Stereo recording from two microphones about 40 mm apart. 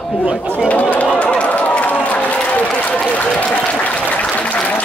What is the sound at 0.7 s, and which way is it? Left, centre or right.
Chatter, left.